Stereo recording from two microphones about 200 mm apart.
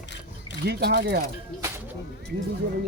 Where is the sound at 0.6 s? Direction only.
55° right (ahead or behind).